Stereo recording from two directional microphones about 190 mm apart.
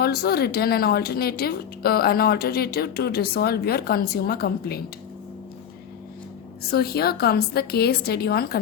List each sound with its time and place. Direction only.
0.0 s speech: 55° left (ahead or behind)
6.7 s speech: 55° left (ahead or behind)